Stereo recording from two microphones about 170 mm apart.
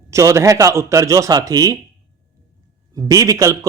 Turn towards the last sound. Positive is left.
turn(degrees=-20)  # may be behind; listen again after turning